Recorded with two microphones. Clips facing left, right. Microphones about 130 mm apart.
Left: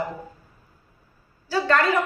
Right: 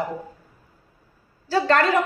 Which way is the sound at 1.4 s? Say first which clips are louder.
Right 2 dB; 35° right (ahead or behind).